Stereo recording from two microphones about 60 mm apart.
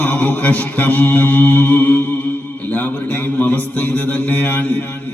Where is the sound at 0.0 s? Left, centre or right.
Left.